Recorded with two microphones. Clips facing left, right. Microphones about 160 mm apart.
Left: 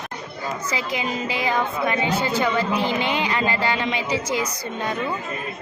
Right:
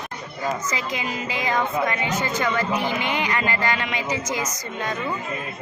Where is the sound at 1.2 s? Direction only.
20° right (ahead or behind).